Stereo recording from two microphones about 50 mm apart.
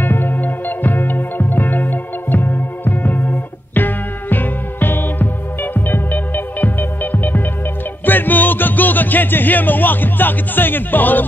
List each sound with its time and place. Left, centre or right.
0.0 s music: left